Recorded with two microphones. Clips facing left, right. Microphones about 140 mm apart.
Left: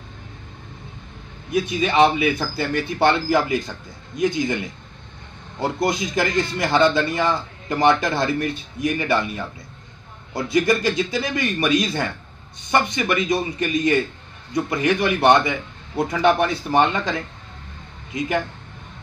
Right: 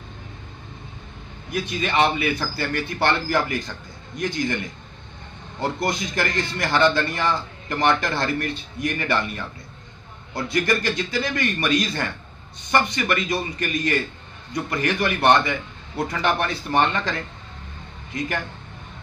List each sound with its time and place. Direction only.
1.5 s a man's voice: 15° left (ahead or behind)
14.7 s a man's voice: 15° left (ahead or behind)